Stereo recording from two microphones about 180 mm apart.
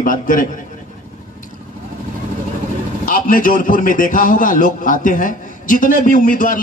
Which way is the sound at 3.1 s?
50° left (ahead or behind).